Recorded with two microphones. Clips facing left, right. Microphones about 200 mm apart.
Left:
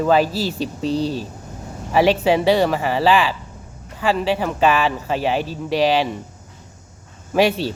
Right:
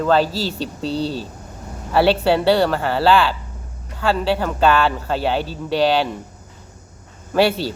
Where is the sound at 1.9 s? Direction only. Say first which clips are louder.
Even; 10° left (ahead or behind).